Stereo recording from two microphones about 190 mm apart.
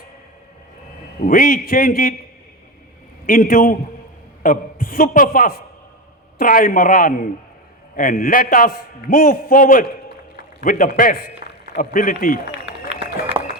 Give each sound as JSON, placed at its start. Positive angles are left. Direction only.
{"t": 1.2, "sound": "a man's voice", "side_deg": 50}
{"t": 3.2, "sound": "a man's voice", "side_deg": 50}
{"t": 12.9, "sound": "a sound", "side_deg": -30}